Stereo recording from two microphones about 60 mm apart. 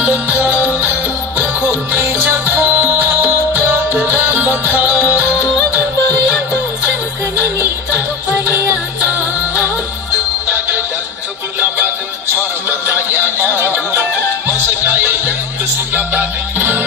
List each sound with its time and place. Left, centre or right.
0.0 s music: right
7.9 s music: right
12.6 s music: right